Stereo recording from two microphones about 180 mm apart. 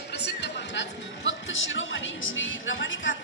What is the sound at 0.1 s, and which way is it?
Speech, 70° left (ahead or behind).